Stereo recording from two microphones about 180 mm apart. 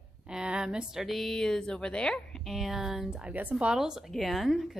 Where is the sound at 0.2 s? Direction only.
5° right (ahead or behind).